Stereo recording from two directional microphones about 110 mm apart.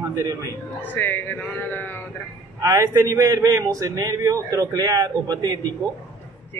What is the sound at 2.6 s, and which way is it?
A man's voice, 30° right (ahead or behind).